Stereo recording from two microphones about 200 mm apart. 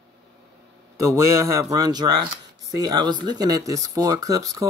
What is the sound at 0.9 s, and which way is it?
Speech, 15° right (ahead or behind).